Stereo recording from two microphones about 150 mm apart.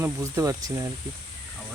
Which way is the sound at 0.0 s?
15° right (ahead or behind).